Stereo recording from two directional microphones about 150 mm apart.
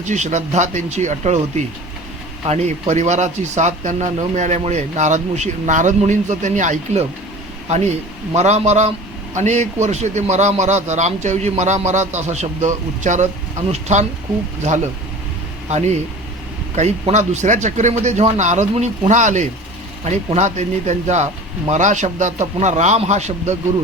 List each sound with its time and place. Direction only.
0.0 s a man's voice: 55° right (ahead or behind)
8.4 s a man's voice: 45° right (ahead or behind)
16.7 s a man's voice: 50° right (ahead or behind)